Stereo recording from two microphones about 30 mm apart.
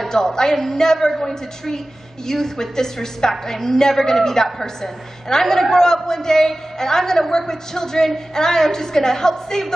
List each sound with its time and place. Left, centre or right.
0.1 s a woman's voice: centre